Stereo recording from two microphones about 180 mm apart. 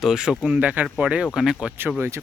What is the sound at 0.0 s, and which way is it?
Speech, 5° right (ahead or behind).